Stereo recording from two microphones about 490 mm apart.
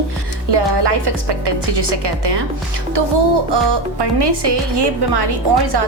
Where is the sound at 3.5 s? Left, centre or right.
Right.